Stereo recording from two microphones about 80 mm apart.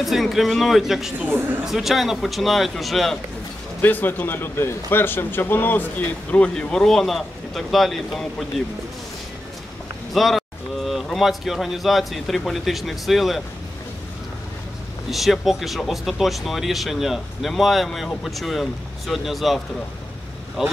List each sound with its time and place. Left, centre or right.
0.0 s speech: centre
3.8 s a man's voice: left
6.5 s speech: centre
10.1 s speech: centre
15.0 s speech: centre